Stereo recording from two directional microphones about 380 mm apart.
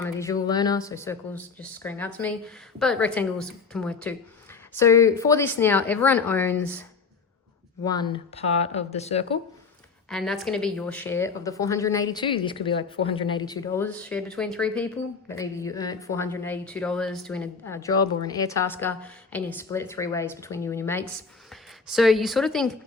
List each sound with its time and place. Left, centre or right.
0.0 s a sound: centre
0.4 s speech: centre
7.9 s a woman's voice: centre
10.1 s a woman's voice: centre